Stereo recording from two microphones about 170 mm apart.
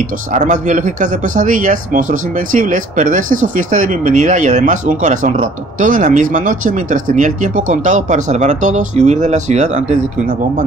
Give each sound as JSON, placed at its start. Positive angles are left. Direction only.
{"t": 0.3, "sound": "speech", "side_deg": -45}